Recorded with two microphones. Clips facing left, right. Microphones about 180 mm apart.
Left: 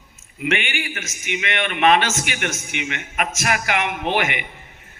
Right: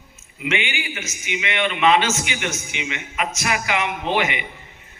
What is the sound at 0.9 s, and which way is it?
A man's voice, 55° left (ahead or behind).